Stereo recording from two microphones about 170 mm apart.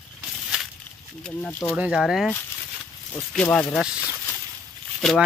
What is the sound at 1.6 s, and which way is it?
Speech, 5° right (ahead or behind).